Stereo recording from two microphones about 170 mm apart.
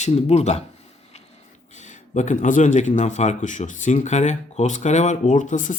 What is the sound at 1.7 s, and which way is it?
Speech, 45° left (ahead or behind).